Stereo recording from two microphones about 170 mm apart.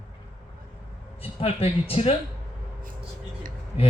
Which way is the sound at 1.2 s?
35° left (ahead or behind).